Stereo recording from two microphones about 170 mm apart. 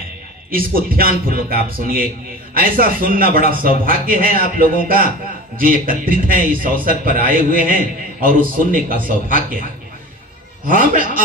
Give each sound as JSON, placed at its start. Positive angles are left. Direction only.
{"t": 0.5, "sound": "a man's voice", "side_deg": -60}
{"t": 10.7, "sound": "a man's voice", "side_deg": -50}